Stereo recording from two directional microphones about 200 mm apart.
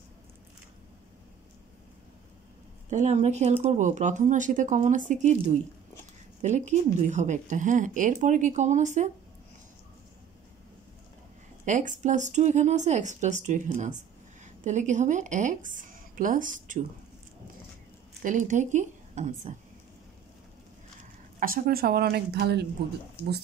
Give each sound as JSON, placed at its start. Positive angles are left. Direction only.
{"t": 2.9, "sound": "speech", "side_deg": -35}
{"t": 11.6, "sound": "speech", "side_deg": -40}
{"t": 18.2, "sound": "a woman's voice", "side_deg": -40}
{"t": 21.4, "sound": "a woman's voice", "side_deg": -45}